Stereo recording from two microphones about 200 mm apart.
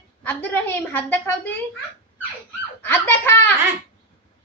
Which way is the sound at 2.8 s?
10° left (ahead or behind).